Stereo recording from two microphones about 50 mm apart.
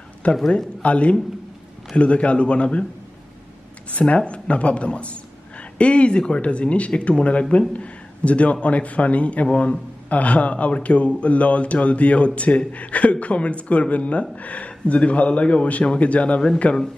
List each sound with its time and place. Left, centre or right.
0.2 s a man's voice: left
3.9 s a man's voice: left